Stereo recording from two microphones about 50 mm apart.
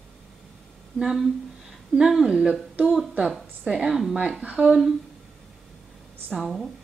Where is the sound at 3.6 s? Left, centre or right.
Centre.